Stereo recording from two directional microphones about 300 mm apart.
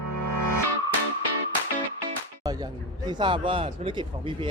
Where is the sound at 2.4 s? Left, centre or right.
Centre.